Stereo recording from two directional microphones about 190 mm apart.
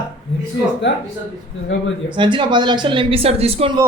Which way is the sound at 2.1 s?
25° right (ahead or behind).